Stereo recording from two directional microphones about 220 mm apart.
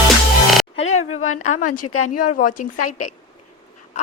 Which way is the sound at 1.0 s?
75° left (ahead or behind).